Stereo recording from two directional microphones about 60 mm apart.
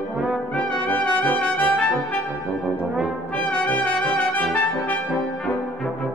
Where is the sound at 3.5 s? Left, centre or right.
Left.